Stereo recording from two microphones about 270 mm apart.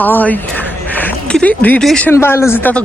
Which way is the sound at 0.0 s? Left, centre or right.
Centre.